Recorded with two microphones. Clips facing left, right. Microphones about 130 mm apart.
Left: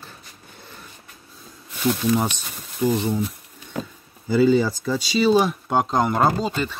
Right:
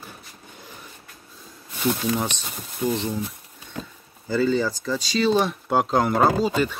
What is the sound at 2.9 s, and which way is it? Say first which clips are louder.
Speech: left 3 dB; 10° left (ahead or behind).